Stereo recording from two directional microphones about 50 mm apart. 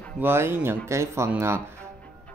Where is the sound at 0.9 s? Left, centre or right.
Right.